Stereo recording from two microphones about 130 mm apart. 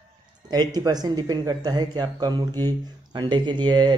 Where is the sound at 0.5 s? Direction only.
30° right (ahead or behind).